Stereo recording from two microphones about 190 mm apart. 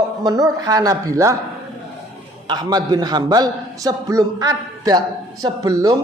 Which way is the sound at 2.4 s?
20° right (ahead or behind).